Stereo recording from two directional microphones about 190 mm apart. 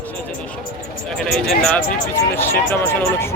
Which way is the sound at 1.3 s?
5° left (ahead or behind).